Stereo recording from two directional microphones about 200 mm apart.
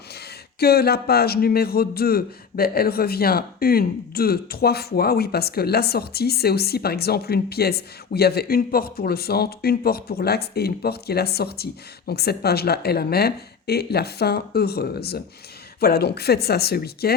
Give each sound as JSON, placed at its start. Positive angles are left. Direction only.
{"t": 0.6, "sound": "a man's voice", "side_deg": 50}